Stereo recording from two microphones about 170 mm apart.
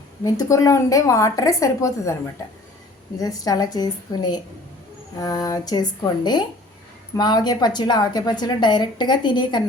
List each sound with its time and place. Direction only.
0.3 s a woman's voice: 20° left (ahead or behind)